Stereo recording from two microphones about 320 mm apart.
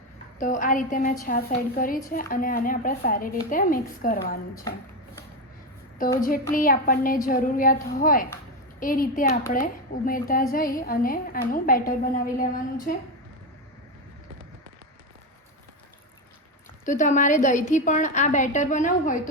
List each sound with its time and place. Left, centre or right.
0.3 s a woman's voice: left
6.1 s a woman's voice: left
16.8 s a woman's voice: left